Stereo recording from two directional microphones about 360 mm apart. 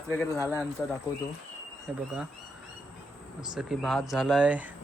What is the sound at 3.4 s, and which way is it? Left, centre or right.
Speech, centre.